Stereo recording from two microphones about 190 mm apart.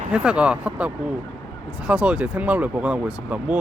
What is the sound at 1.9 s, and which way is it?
Speech, 5° right (ahead or behind).